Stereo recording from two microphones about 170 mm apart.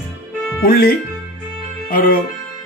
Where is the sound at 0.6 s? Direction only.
60° left (ahead or behind).